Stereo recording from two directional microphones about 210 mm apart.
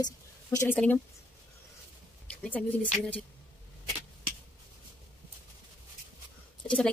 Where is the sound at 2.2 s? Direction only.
5° left (ahead or behind).